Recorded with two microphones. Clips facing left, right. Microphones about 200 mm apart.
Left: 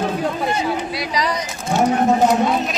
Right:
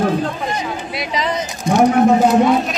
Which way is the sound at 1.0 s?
25° right (ahead or behind).